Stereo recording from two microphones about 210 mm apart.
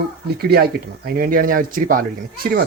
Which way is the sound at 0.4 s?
45° right (ahead or behind).